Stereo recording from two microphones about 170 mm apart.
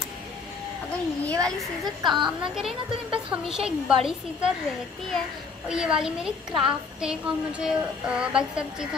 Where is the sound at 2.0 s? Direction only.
25° right (ahead or behind).